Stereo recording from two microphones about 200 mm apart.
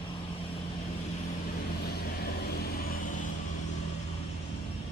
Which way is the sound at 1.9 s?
50° left (ahead or behind).